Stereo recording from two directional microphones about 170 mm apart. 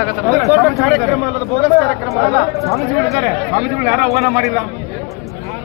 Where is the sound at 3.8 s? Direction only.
45° right (ahead or behind).